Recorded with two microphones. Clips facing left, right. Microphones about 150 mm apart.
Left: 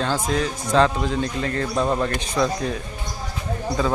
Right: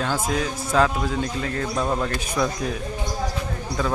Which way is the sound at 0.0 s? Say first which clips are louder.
Left 2 dB; 5° right (ahead or behind).